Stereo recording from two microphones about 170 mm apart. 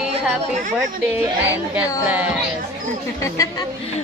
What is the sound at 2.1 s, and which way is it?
Speech, 10° right (ahead or behind).